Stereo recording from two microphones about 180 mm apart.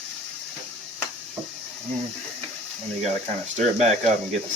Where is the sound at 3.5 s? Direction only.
40° right (ahead or behind).